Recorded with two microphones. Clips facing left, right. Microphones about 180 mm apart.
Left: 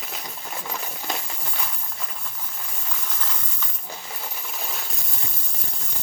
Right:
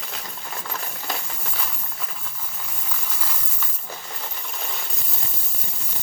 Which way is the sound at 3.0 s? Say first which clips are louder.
Right 1 dB; 5° right (ahead or behind).